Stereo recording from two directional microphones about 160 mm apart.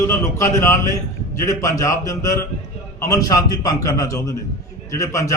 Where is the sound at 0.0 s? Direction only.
20° left (ahead or behind).